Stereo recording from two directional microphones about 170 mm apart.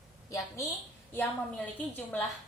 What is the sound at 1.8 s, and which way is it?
Speech, 10° left (ahead or behind).